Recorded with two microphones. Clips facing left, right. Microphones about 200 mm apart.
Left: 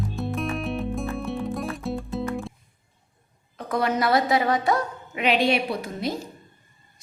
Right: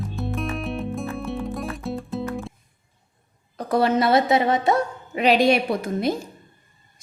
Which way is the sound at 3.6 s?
30° right (ahead or behind).